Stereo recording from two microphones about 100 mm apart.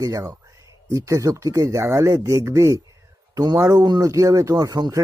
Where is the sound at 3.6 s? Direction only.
30° right (ahead or behind).